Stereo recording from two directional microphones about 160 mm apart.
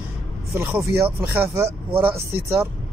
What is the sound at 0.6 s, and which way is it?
Speech, 10° right (ahead or behind).